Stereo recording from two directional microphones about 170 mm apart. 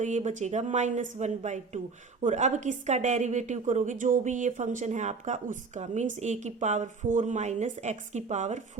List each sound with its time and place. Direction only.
0.0 s a woman's voice: 45° right (ahead or behind)